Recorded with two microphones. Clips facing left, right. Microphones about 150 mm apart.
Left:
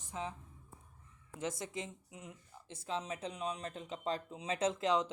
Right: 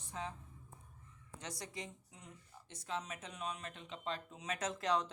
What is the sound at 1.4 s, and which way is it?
Speech, 25° left (ahead or behind).